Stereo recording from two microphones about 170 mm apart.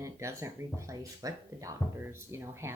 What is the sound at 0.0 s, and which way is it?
Speech, 15° right (ahead or behind).